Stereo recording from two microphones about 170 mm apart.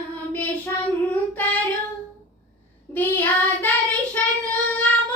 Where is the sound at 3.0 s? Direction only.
10° left (ahead or behind).